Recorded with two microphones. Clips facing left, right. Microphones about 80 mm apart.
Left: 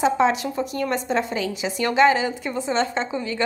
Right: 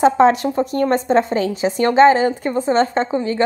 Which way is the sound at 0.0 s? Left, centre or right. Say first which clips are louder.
Right 7 dB; right.